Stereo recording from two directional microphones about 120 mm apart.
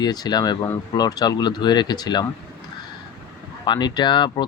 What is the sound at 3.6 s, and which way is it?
Speech, 35° left (ahead or behind).